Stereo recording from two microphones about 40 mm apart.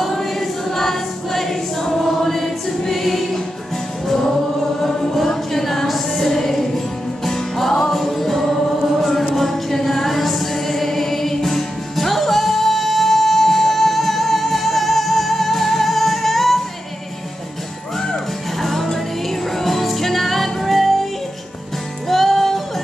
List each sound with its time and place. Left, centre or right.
0.0 s choir: centre
4.8 s choir: centre
7.2 s music: centre
18.6 s music: centre